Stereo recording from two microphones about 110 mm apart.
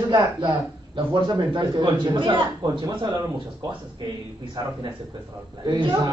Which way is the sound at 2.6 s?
35° right (ahead or behind).